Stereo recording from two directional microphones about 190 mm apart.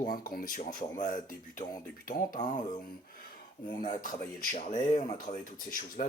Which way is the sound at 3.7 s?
45° left (ahead or behind).